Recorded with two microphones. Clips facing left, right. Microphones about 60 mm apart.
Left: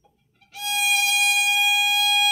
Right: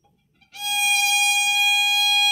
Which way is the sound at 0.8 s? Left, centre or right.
Centre.